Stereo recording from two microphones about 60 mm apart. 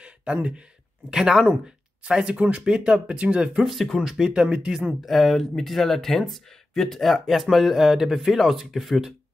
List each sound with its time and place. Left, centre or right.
0.0 s a sound: centre
1.1 s speech: centre
3.5 s speech: centre
5.0 s speech: centre